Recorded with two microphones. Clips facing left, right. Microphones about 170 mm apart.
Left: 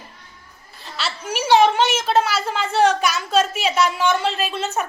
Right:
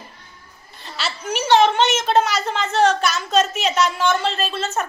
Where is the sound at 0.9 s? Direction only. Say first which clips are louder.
Right 1 dB; centre (ahead or behind).